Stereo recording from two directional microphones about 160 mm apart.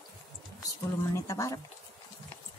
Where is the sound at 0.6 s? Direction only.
20° left (ahead or behind).